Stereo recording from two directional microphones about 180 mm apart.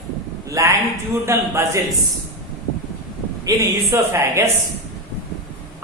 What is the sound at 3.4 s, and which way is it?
Speech, 15° right (ahead or behind).